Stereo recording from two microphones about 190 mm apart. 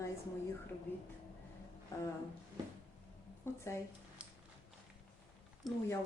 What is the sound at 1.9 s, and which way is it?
Speech, 15° left (ahead or behind).